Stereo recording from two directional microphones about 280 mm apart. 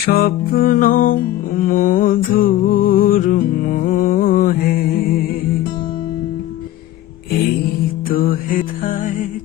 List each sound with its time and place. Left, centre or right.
0.0 s music: left
8.0 s music: left